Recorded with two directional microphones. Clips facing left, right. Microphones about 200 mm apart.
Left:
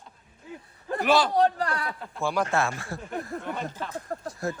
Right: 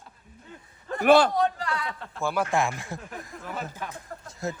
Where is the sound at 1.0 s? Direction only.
55° right (ahead or behind).